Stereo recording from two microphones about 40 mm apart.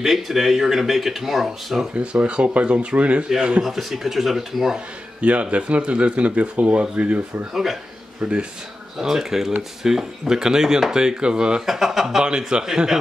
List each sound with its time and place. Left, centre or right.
0.0 s speech: centre
2.0 s a man's voice: right
3.6 s speech: centre
4.7 s speech: right
8.2 s a man's voice: right
8.9 s speech: centre
11.6 s speech: centre
12.2 s a man's voice: centre